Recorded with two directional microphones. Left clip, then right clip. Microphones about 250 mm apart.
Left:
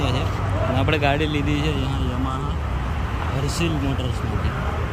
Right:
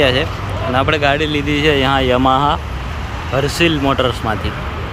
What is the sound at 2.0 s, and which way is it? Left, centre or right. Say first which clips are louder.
Speech: right 16 dB; right.